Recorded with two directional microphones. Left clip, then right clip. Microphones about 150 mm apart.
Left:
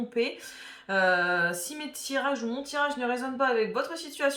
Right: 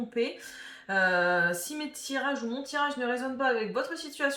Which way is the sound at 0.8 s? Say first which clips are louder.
Left 1 dB; 20° left (ahead or behind).